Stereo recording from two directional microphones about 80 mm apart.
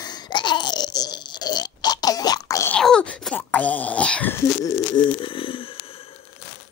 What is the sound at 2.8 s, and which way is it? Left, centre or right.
Wail, centre.